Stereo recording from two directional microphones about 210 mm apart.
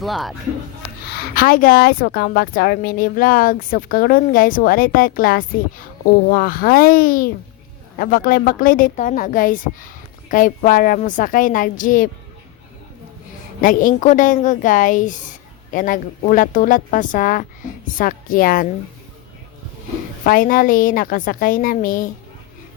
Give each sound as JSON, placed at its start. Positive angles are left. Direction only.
{"t": 0.0, "sound": "speech", "side_deg": 0}
{"t": 1.4, "sound": "a woman's voice", "side_deg": 40}
{"t": 13.6, "sound": "a woman's voice", "side_deg": 40}
{"t": 20.2, "sound": "a woman's voice", "side_deg": 40}